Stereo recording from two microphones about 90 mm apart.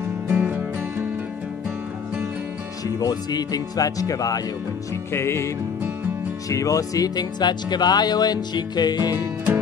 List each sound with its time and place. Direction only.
0.3 s music: 20° right (ahead or behind)
3.0 s speech: 45° left (ahead or behind)
5.1 s music: 30° left (ahead or behind)
6.5 s speech: 40° left (ahead or behind)